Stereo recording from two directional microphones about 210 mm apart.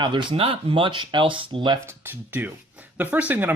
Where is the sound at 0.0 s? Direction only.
20° right (ahead or behind).